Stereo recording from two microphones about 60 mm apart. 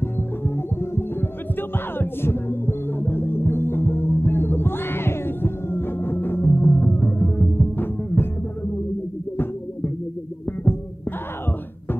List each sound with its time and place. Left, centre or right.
1.6 s music: left